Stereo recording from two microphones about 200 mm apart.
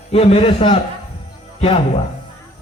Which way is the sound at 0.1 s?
30° left (ahead or behind).